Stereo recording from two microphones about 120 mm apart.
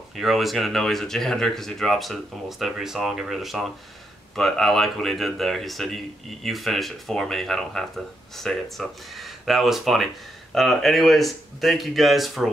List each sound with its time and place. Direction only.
0.1 s speech: centre (ahead or behind)